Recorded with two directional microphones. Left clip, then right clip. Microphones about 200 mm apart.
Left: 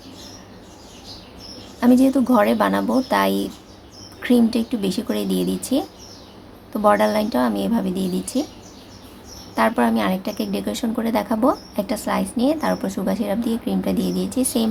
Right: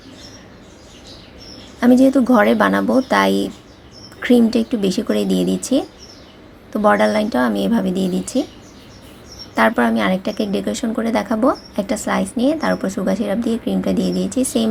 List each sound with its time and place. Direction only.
1.8 s a woman's voice: 15° right (ahead or behind)
6.8 s a woman's voice: 10° right (ahead or behind)
9.6 s a woman's voice: 10° right (ahead or behind)